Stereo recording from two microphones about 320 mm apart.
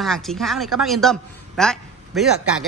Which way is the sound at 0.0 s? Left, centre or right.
Centre.